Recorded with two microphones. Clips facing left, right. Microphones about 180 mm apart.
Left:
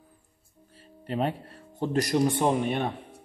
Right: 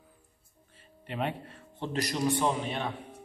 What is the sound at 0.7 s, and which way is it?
Speech, 40° left (ahead or behind).